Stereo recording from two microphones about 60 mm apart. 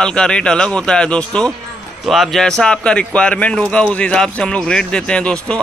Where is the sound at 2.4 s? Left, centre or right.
Centre.